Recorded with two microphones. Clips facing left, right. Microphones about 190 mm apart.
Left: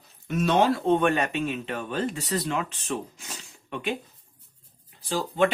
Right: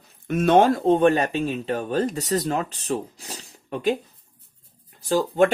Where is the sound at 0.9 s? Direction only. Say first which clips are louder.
Right 4 dB; 35° right (ahead or behind).